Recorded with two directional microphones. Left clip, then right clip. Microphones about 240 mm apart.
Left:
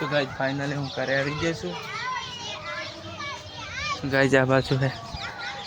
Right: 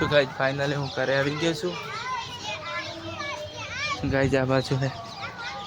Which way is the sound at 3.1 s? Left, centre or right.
Right.